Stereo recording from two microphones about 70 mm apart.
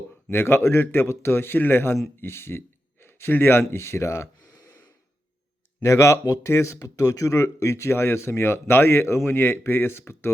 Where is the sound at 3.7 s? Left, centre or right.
Left.